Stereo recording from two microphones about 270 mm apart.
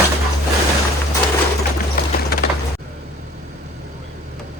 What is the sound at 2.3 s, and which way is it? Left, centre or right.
Music, left.